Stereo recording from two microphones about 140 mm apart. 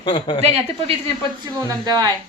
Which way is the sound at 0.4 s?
45° right (ahead or behind).